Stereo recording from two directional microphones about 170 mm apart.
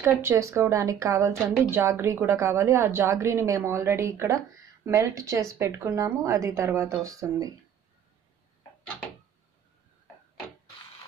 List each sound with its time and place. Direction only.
0.0 s a woman's voice: 15° right (ahead or behind)